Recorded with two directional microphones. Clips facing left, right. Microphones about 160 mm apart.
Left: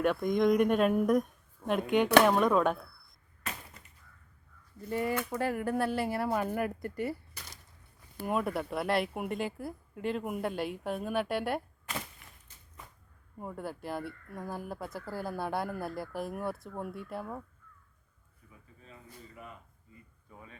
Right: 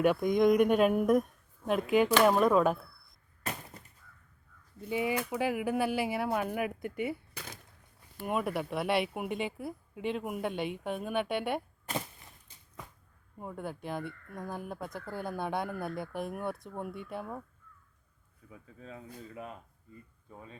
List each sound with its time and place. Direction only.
0.0 s speech: 5° right (ahead or behind)
4.8 s speech: centre (ahead or behind)
8.2 s speech: 5° right (ahead or behind)
13.4 s speech: centre (ahead or behind)
18.8 s speech: 90° right
20.3 s speech: 30° right (ahead or behind)